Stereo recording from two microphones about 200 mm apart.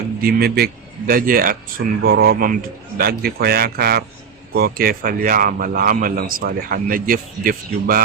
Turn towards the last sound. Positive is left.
turn(degrees=-45)  # may be behind; listen again after turning